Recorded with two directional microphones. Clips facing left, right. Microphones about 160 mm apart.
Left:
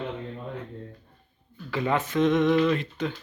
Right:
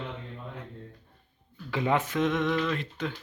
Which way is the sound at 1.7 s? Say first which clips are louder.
Left 1 dB; 15° right (ahead or behind).